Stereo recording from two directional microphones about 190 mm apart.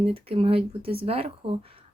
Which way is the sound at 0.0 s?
30° right (ahead or behind).